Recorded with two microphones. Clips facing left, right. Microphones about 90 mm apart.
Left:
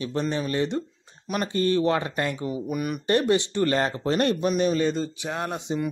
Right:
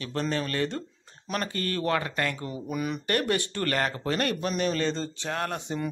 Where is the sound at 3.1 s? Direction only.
20° left (ahead or behind).